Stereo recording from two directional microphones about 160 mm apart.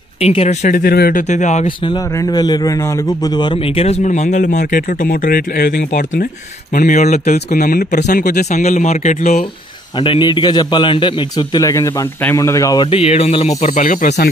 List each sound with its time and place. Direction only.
0.2 s speech: 40° left (ahead or behind); by 1.2 s 70° left (ahead or behind)
1.3 s speech: 45° left (ahead or behind)
1.8 s a man's voice: 25° left (ahead or behind); by 6.2 s 70° left (ahead or behind)
6.7 s speech: 55° left (ahead or behind)
8.5 s speech: 50° left (ahead or behind)
9.9 s a man's voice: 30° left (ahead or behind); by 14.1 s 55° left (ahead or behind)